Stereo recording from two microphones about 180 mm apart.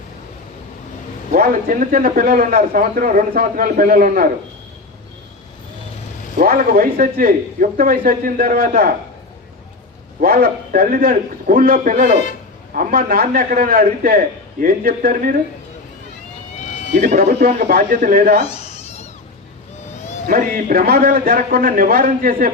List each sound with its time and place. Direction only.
1.3 s a man's voice: 55° right (ahead or behind)
6.4 s a man's voice: 55° right (ahead or behind)
10.2 s a man's voice: 55° right (ahead or behind)
16.9 s a man's voice: 45° right (ahead or behind)
17.4 s a man's voice: 55° right (ahead or behind)
18.4 s cat: 35° left (ahead or behind)
20.2 s a man's voice: 55° right (ahead or behind)